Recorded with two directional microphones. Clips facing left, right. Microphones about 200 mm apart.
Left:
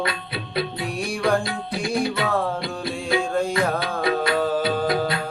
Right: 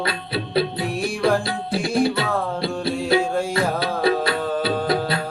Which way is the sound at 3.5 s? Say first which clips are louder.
Right 1 dB; 30° right (ahead or behind).